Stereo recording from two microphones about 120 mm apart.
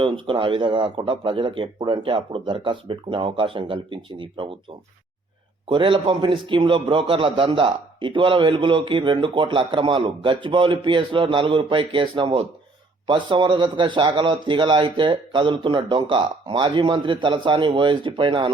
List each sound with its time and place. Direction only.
0.0 s a man's voice: 45° right (ahead or behind)
5.6 s a man's voice: 45° right (ahead or behind)